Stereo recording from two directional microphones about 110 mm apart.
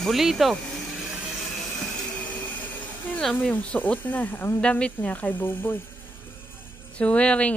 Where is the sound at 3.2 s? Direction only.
5° left (ahead or behind).